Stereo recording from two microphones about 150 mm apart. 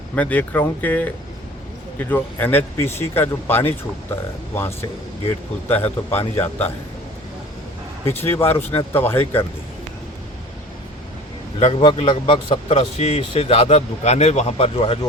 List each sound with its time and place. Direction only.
0.2 s speech: 10° left (ahead or behind)
8.0 s speech: 15° left (ahead or behind)
11.6 s speech: 35° left (ahead or behind)